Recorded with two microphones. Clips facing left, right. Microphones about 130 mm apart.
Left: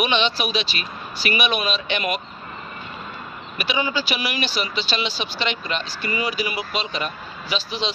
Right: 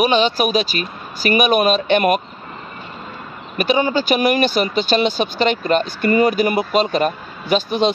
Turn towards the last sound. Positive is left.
turn(degrees=-50)  # may be behind; listen again after turning